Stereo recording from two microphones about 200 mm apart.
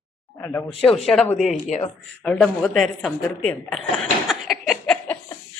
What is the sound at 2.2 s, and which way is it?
Speech, 5° left (ahead or behind).